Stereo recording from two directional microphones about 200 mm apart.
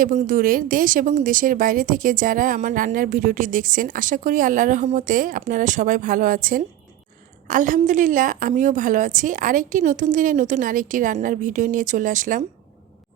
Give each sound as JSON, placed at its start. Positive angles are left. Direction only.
{"t": 0.0, "sound": "a woman's voice", "side_deg": -40}